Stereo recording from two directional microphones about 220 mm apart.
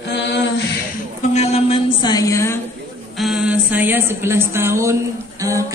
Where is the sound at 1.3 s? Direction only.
30° left (ahead or behind); by 2.5 s 15° left (ahead or behind).